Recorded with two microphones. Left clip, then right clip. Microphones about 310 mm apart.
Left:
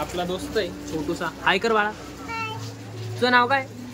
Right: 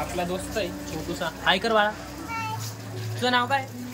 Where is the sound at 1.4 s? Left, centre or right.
Centre.